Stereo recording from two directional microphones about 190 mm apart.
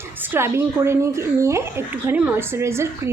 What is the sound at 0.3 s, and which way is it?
A woman's voice, 15° right (ahead or behind).